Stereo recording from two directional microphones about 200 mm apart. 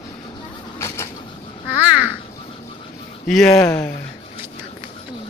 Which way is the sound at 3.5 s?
15° left (ahead or behind).